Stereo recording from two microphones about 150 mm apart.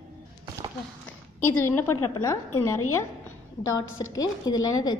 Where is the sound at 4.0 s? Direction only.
30° left (ahead or behind).